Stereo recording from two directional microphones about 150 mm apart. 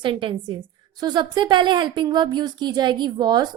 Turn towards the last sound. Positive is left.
turn(degrees=-30)  # may be behind; listen again after turning